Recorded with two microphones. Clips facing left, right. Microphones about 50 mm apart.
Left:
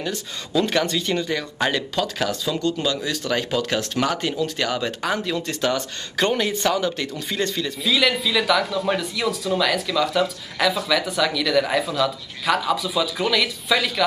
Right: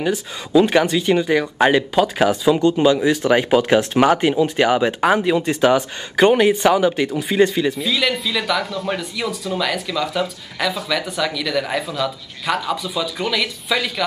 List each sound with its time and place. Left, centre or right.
0.0 s speech: centre
7.8 s speech: centre